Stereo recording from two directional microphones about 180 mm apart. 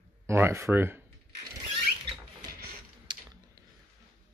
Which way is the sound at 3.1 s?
25° right (ahead or behind).